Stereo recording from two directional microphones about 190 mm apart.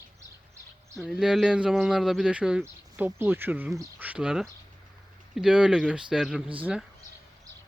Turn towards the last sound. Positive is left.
turn(degrees=-5)  # may be behind; listen again after turning